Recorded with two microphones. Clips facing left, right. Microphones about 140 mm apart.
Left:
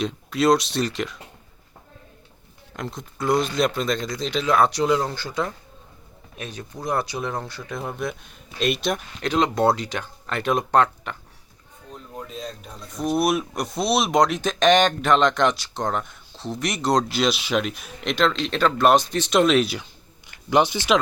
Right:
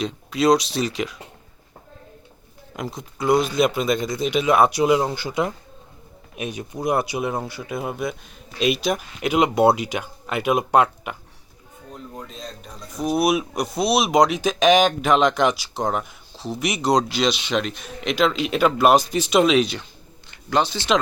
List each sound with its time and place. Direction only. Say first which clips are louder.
0.0 s speech: right 1 dB; centre (ahead or behind)
2.7 s speech: right 2 dB; 5° right (ahead or behind)
11.9 s speech: even; 5° left (ahead or behind)
20.5 s speech: left 2 dB; 15° left (ahead or behind)